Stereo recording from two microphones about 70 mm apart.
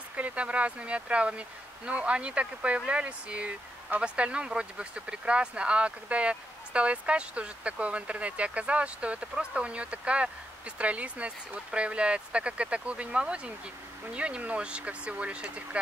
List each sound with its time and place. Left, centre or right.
0.1 s speech: right